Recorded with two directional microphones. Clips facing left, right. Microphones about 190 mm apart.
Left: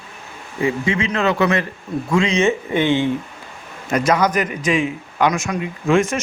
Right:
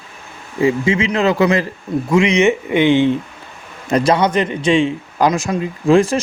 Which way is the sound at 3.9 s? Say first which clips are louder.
Right 3 dB; 30° right (ahead or behind).